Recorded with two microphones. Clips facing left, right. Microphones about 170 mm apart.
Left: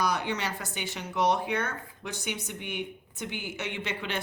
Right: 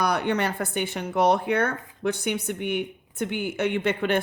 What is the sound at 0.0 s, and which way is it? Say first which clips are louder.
Speech: right 5 dB; 60° right (ahead or behind).